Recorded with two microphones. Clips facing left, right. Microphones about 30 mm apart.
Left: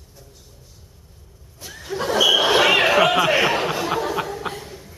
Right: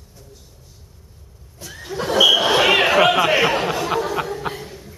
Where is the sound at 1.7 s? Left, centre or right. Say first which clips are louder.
Even; centre.